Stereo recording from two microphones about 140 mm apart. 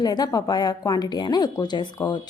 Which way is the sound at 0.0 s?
30° left (ahead or behind).